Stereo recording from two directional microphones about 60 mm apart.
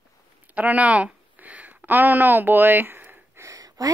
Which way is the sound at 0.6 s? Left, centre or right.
Right.